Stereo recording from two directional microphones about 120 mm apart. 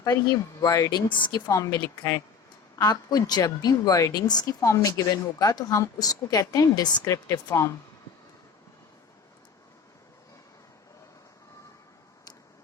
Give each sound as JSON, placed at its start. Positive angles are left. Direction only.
{"t": 0.0, "sound": "speech", "side_deg": 30}
{"t": 1.0, "sound": "a woman's voice", "side_deg": 40}
{"t": 1.5, "sound": "a woman's voice", "side_deg": 25}